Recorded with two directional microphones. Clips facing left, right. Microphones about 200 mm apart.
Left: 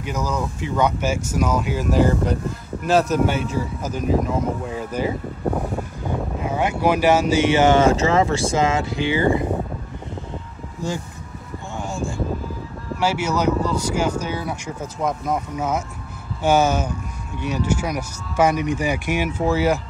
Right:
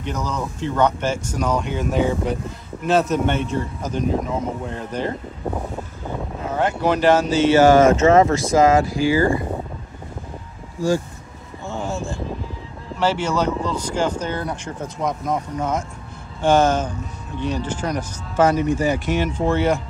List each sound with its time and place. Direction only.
0.0 s speech: 5° left (ahead or behind)
11.7 s a sound: 15° left (ahead or behind)
12.9 s speech: 10° left (ahead or behind)